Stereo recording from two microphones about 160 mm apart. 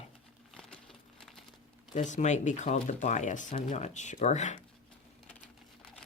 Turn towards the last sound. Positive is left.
turn(degrees=50)  # may be behind; listen again after turning